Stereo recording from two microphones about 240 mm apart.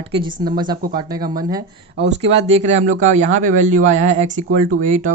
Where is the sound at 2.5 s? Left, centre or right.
Right.